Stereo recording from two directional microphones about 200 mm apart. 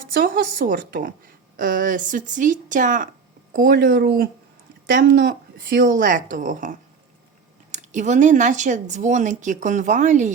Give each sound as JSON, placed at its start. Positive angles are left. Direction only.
{"t": 0.2, "sound": "a woman's voice", "side_deg": -45}